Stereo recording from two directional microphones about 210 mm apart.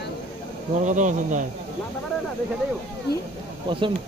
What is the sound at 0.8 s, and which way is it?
Speech, 35° right (ahead or behind).